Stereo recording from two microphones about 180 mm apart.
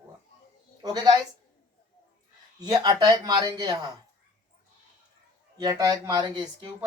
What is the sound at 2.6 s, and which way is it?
Speech, 20° right (ahead or behind).